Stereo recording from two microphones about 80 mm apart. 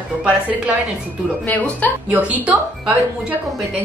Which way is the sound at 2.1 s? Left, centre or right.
Centre.